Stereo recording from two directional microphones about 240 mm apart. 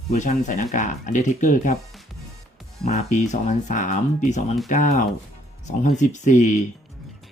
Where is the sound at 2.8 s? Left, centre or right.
Left.